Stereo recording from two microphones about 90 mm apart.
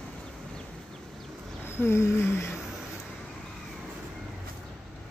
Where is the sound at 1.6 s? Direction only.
25° left (ahead or behind).